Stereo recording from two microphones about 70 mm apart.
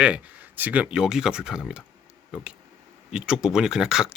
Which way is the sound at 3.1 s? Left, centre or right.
Centre.